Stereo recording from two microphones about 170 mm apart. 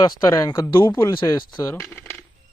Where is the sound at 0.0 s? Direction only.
20° left (ahead or behind).